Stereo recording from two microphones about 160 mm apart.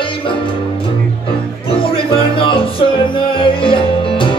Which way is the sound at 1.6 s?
35° left (ahead or behind).